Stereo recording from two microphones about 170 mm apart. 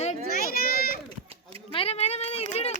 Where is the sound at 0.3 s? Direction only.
60° left (ahead or behind).